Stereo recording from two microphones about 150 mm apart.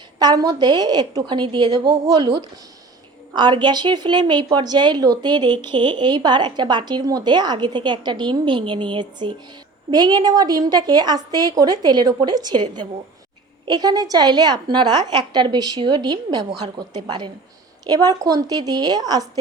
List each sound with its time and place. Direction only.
0.2 s a woman's voice: 25° right (ahead or behind)